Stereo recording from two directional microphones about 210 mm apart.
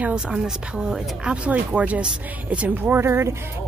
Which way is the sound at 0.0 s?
5° right (ahead or behind).